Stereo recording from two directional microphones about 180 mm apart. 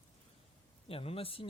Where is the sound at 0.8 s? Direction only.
30° left (ahead or behind).